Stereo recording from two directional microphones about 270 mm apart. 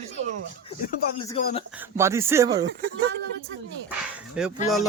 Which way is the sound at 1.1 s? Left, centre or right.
Centre.